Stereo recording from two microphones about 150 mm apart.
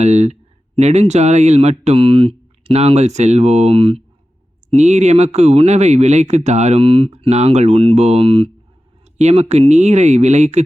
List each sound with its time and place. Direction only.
0.0 s speech: 45° right (ahead or behind)